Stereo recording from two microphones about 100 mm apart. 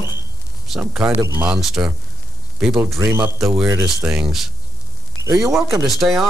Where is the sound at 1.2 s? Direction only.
25° right (ahead or behind).